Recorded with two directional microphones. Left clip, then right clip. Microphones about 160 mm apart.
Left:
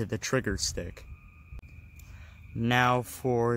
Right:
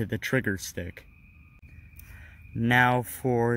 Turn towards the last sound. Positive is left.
turn(degrees=-20)  # may be behind; listen again after turning